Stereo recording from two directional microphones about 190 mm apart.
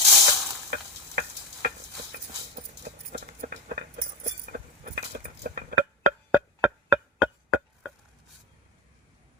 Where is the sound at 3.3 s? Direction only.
50° right (ahead or behind).